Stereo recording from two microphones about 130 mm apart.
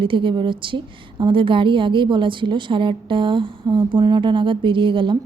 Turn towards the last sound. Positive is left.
turn(degrees=-40)  # may be behind; listen again after turning